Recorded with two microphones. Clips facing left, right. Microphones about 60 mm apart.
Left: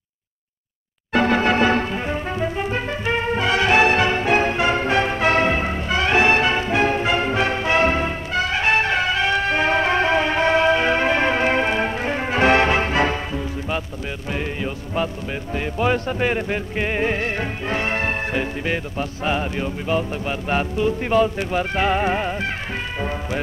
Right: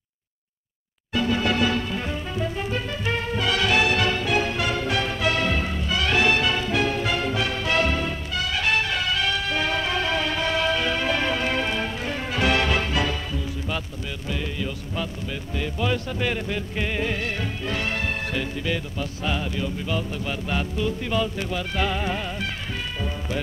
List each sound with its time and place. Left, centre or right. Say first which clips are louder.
1.1 s music: left 6 dB; left
1.4 s music: left 5 dB; left
2.0 s brass instrument: left 5 dB; left
14.3 s music: left 3 dB; left